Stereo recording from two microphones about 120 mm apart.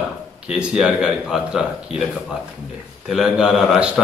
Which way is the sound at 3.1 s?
5° right (ahead or behind).